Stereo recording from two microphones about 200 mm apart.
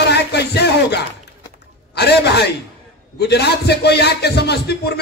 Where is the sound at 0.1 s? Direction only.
55° left (ahead or behind).